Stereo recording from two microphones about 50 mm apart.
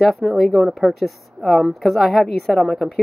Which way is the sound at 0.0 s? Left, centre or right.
Centre.